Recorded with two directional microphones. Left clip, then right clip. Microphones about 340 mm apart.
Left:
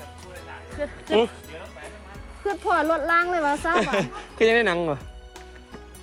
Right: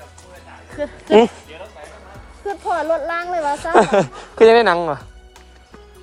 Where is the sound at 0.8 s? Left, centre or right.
Right.